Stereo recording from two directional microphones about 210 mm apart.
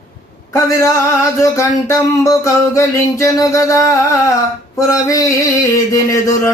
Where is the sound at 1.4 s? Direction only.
15° left (ahead or behind).